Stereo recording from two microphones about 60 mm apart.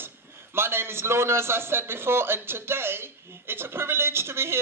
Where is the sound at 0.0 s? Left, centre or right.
Right.